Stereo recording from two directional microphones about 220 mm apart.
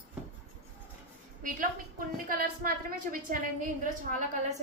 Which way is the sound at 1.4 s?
40° right (ahead or behind).